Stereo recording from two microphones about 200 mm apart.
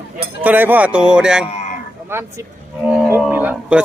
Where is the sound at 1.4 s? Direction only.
30° left (ahead or behind).